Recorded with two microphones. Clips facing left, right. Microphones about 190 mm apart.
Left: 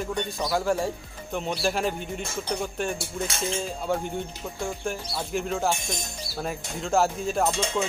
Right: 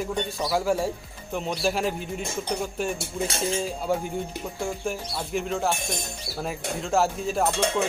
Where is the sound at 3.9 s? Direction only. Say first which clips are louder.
Even; 10° right (ahead or behind).